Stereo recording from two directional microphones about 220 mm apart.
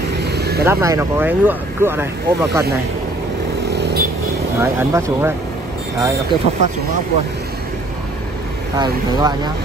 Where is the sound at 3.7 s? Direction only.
50° right (ahead or behind).